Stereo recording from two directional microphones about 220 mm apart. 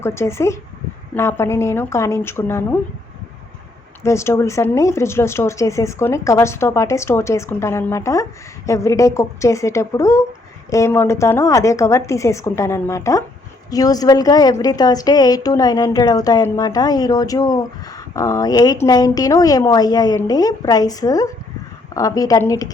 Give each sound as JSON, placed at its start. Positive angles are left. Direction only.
{"t": 0.0, "sound": "a woman's voice", "side_deg": 10}
{"t": 4.0, "sound": "a woman's voice", "side_deg": 10}